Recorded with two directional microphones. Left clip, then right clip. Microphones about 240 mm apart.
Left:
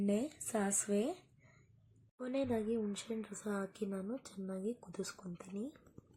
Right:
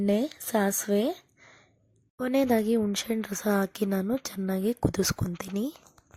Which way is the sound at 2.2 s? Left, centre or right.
Right.